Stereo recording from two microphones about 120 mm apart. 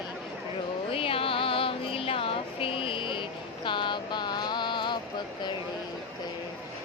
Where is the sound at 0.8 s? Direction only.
50° left (ahead or behind).